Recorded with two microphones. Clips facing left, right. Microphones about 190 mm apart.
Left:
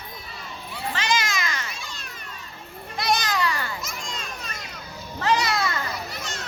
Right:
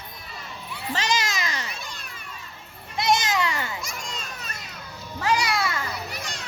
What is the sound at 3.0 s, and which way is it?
Children playing, 25° right (ahead or behind).